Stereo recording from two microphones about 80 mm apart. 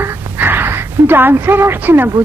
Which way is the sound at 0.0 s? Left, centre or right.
Right.